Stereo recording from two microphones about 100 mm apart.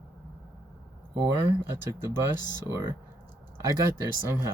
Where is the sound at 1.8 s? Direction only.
25° right (ahead or behind).